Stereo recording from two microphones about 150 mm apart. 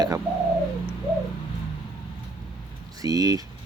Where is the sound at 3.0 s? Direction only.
25° right (ahead or behind).